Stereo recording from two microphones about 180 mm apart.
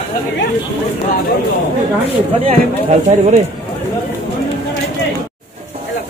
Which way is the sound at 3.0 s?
40° right (ahead or behind).